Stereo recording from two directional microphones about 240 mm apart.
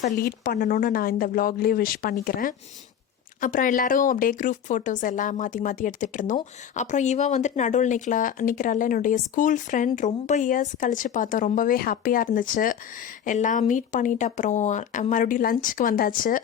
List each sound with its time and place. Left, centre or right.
0.0 s speech: left